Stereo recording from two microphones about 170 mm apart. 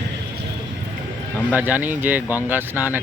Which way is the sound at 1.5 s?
10° right (ahead or behind).